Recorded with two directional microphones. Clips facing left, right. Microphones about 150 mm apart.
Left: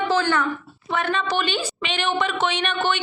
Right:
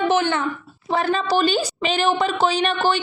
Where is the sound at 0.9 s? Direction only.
35° right (ahead or behind).